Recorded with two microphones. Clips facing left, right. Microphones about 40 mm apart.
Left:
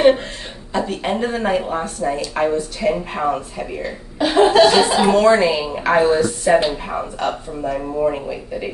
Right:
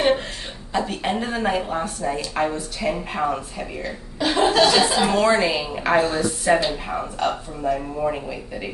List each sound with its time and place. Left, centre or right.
0.7 s speech: centre
5.1 s speech: centre
5.9 s speech: centre
6.2 s speech: centre